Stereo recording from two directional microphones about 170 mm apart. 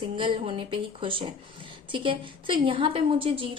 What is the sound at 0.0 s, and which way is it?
A woman's voice, 30° right (ahead or behind).